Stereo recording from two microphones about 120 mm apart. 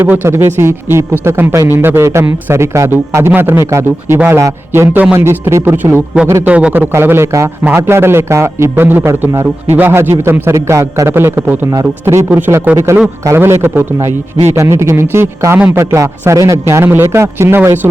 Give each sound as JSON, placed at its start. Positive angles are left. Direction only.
{"t": 0.0, "sound": "a man's voice", "side_deg": -15}